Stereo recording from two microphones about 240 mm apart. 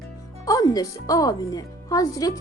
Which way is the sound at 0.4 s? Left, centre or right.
Centre.